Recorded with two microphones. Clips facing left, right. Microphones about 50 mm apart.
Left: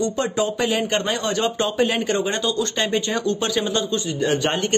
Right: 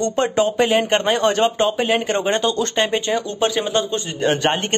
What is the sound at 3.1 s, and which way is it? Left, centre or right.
Speech, right.